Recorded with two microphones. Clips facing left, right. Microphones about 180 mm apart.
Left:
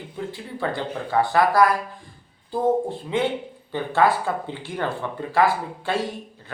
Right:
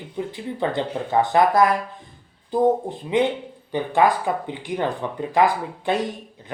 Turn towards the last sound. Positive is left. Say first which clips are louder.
# right 2 dB
turn(degrees=-20)  # may be behind; listen again after turning